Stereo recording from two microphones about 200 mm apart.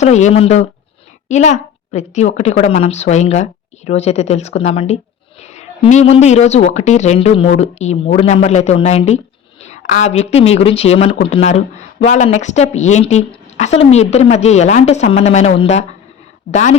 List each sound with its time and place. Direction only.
0.0 s a woman's voice: 35° left (ahead or behind)